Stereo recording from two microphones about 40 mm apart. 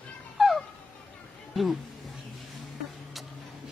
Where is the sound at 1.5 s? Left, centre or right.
Centre.